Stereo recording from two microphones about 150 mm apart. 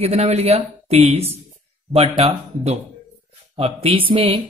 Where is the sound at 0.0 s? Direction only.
45° right (ahead or behind).